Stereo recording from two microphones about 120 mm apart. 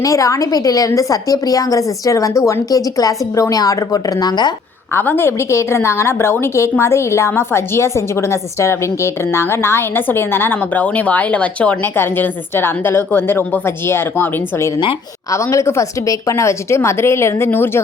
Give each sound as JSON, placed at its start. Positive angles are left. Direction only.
{"t": 0.0, "sound": "a woman's voice", "side_deg": 25}
{"t": 4.9, "sound": "a woman's voice", "side_deg": 20}